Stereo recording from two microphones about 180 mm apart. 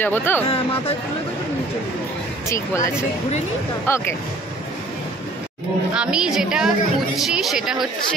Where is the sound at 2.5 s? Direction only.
15° left (ahead or behind).